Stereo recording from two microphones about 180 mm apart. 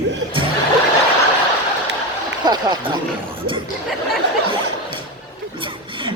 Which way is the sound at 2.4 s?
25° right (ahead or behind).